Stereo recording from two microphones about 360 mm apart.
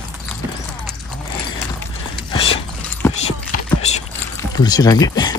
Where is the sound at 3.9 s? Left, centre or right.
Centre.